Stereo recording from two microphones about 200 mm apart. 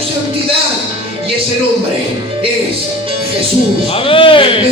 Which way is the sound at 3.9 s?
25° left (ahead or behind).